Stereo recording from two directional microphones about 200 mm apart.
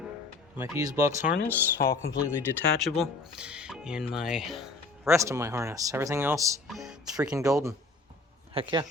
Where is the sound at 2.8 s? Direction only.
Centre (ahead or behind).